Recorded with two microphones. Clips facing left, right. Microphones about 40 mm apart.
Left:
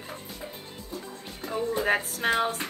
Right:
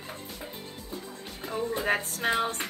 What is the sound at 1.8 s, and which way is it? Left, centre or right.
Speech, centre.